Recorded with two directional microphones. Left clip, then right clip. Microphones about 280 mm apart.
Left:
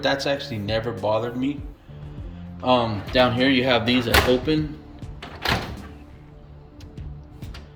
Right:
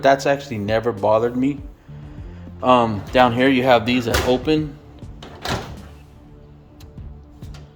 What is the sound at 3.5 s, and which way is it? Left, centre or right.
Speech, centre.